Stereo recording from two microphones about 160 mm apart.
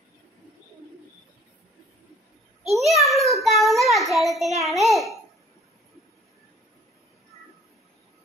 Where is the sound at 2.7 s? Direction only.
Centre (ahead or behind).